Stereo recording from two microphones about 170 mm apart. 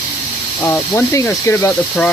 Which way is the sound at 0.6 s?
15° left (ahead or behind).